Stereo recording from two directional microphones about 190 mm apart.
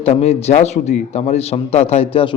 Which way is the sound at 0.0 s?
30° left (ahead or behind).